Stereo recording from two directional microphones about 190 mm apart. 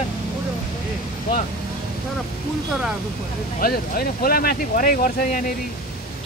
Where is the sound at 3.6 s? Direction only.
50° left (ahead or behind).